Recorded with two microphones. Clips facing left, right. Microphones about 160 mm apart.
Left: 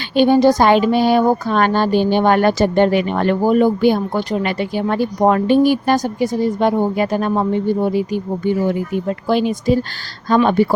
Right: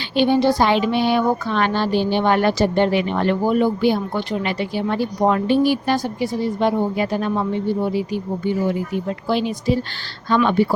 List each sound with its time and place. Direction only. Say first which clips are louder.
0.2 s speech: left 4 dB; 45° left (ahead or behind)